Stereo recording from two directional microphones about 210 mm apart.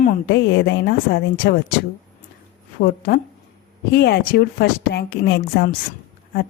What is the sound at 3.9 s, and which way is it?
Speech, 50° left (ahead or behind).